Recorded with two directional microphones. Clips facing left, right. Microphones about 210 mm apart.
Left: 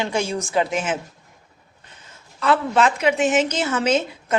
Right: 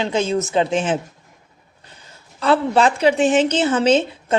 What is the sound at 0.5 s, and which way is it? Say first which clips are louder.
Speech: right 2 dB; 30° right (ahead or behind).